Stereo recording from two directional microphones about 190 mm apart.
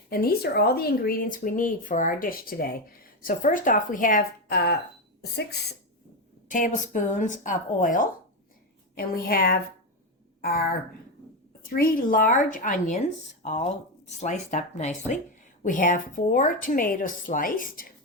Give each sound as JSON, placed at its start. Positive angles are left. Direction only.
{"t": 0.1, "sound": "speech", "side_deg": 50}
{"t": 6.5, "sound": "speech", "side_deg": 45}